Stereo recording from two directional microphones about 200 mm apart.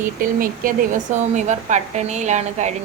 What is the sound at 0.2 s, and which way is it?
Speech, 45° right (ahead or behind).